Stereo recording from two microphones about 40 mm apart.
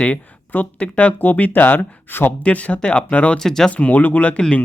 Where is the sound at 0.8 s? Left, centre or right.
Left.